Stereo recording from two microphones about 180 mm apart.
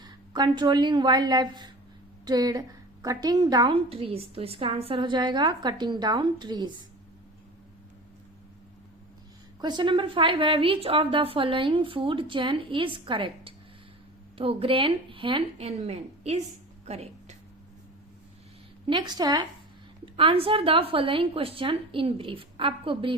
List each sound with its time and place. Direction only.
0.0 s a woman's voice: 25° right (ahead or behind)
9.6 s a woman's voice: 25° right (ahead or behind)
16.8 s a sound: 35° right (ahead or behind)
18.9 s a woman's voice: 25° right (ahead or behind)